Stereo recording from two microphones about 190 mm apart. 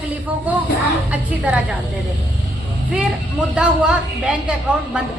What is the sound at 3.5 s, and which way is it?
Speech, 5° right (ahead or behind).